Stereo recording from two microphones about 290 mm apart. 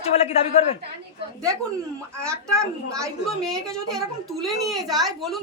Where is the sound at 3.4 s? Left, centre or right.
Centre.